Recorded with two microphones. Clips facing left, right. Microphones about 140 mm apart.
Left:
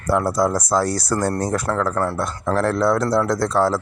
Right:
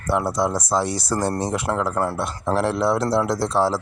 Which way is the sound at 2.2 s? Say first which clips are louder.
Left 1 dB; 25° right (ahead or behind).